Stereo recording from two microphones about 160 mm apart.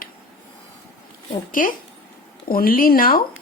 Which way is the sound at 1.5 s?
60° left (ahead or behind).